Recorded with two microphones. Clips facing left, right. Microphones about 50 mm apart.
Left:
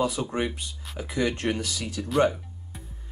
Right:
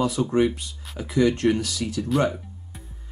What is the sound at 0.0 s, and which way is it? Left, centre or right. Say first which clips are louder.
Speech: right 5 dB; centre.